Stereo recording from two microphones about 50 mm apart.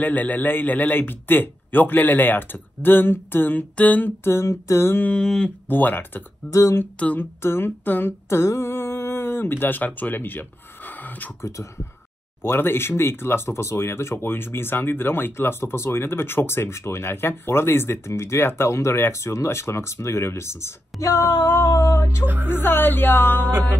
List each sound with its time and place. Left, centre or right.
0.0 s a man's voice: left
3.7 s a man's voice: left
4.2 s speech: left
4.5 s a sound: left
5.1 s a sound: centre
5.7 s a man's voice: left
6.5 s a sound: left
7.2 s speech: left
8.3 s speech: left
8.6 s a sound: left
12.4 s speech: left
14.1 s speech: left
22.2 s speech: right
22.5 s speech: left